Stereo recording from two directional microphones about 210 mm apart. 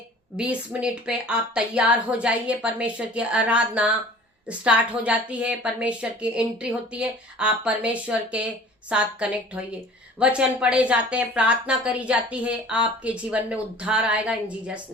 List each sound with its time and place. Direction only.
0.3 s a woman's voice: 5° right (ahead or behind)